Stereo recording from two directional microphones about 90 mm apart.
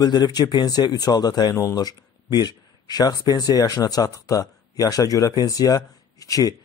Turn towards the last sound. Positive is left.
turn(degrees=40)  # may be behind; listen again after turning